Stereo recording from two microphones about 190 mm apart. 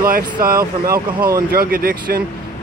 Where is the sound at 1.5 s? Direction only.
50° right (ahead or behind).